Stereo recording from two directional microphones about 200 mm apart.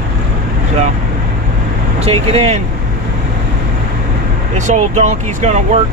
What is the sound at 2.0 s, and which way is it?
Speech, 30° right (ahead or behind).